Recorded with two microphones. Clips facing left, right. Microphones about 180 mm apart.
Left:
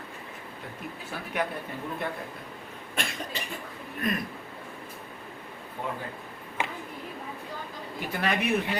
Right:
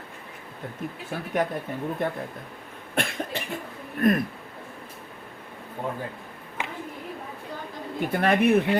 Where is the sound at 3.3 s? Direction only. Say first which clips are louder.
Right 4 dB; 55° right (ahead or behind).